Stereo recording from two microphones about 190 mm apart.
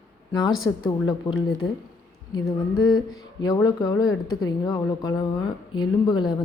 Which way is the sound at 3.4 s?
20° left (ahead or behind).